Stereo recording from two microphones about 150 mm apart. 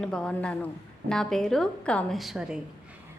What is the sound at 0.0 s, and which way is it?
A woman's voice, 5° left (ahead or behind).